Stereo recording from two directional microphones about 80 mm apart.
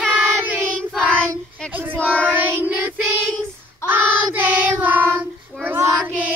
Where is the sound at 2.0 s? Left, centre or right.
Centre.